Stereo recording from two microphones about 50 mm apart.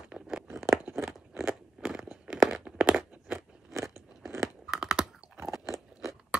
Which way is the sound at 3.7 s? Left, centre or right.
Right.